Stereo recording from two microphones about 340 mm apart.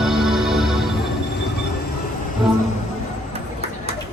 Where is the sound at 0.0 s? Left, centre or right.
Centre.